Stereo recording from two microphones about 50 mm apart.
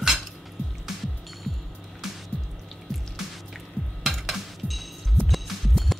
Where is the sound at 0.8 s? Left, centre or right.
Centre.